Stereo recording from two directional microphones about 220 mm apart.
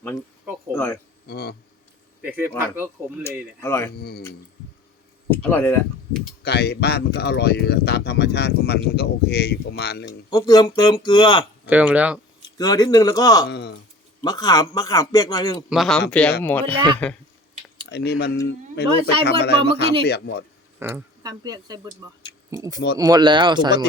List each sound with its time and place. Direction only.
0.7 s a sound: 10° left (ahead or behind)
1.3 s a sound: 45° left (ahead or behind)
2.6 s speech: 10° right (ahead or behind)
3.2 s a man's voice: 10° left (ahead or behind)
5.3 s speech: 10° left (ahead or behind)
6.4 s speech: 45° left (ahead or behind)
10.1 s speech: 15° left (ahead or behind)
11.6 s speech: 5° right (ahead or behind)
12.5 s a man's voice: 15° left (ahead or behind)
13.5 s speech: 50° left (ahead or behind)
14.2 s a man's voice: 15° left (ahead or behind)
15.7 s a man's voice: centre (ahead or behind)
17.8 s speech: 50° left (ahead or behind)
20.7 s speech: 10° right (ahead or behind)